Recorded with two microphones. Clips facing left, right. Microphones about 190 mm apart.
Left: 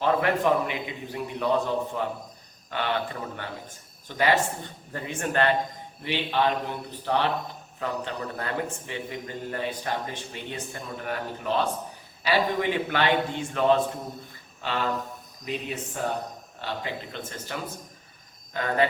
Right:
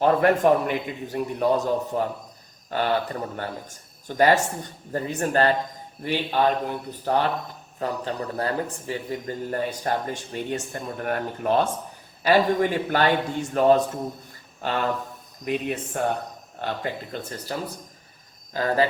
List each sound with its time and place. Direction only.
0.0 s a man's voice: 45° right (ahead or behind)